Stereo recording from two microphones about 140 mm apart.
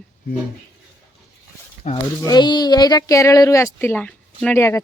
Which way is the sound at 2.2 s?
30° left (ahead or behind).